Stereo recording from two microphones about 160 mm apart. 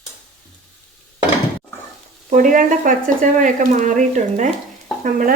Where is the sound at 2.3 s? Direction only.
55° right (ahead or behind).